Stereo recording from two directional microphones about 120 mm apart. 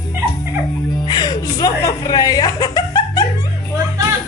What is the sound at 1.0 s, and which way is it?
Music, 35° left (ahead or behind).